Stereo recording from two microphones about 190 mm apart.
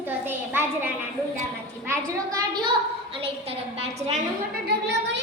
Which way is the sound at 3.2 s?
30° right (ahead or behind).